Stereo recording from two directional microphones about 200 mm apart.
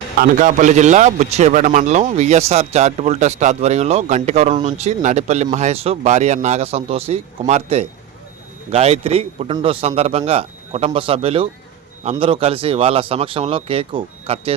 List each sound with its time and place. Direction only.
0.2 s a man's voice: 40° right (ahead or behind)